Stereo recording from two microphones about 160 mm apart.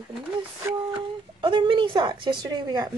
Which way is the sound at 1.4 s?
30° right (ahead or behind).